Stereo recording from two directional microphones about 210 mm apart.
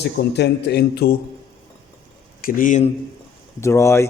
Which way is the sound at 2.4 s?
40° left (ahead or behind).